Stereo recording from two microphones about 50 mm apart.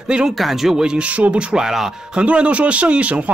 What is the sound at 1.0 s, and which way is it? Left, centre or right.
Speech, right.